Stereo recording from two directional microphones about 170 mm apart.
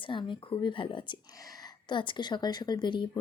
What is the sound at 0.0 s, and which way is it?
Speech, 30° left (ahead or behind).